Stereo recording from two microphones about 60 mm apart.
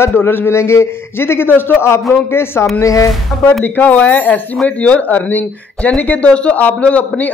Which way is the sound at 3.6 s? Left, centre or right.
Left.